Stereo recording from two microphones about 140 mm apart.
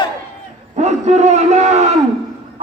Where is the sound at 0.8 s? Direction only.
55° right (ahead or behind).